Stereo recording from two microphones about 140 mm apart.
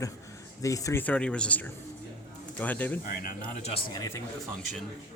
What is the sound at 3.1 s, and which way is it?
Speech, 90° left.